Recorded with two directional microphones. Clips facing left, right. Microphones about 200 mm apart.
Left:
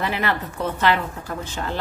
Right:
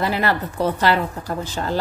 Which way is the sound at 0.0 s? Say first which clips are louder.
Right 3 dB; 35° right (ahead or behind).